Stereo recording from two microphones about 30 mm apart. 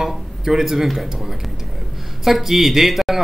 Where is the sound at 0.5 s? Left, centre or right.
Centre.